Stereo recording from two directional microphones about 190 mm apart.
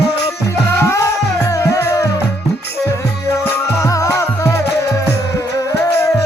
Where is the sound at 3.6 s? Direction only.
15° left (ahead or behind).